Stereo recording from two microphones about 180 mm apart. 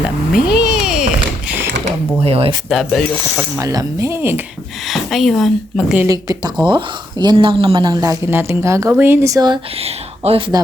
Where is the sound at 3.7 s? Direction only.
15° right (ahead or behind).